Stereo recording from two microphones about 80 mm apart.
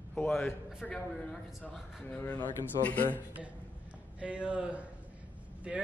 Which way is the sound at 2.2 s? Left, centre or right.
Centre.